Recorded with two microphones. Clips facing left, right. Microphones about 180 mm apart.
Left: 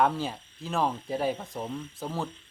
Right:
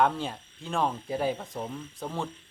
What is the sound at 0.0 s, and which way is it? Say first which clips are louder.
Speech: even; centre (ahead or behind).